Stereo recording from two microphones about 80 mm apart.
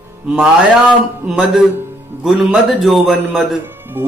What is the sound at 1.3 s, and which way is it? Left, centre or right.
A man's voice, centre.